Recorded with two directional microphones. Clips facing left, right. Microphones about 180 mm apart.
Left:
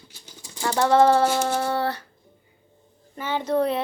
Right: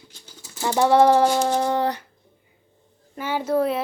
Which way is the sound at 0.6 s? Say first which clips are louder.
Right 2 dB; 15° right (ahead or behind).